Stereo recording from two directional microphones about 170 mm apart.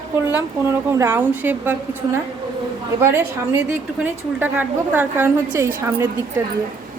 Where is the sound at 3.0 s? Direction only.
15° right (ahead or behind).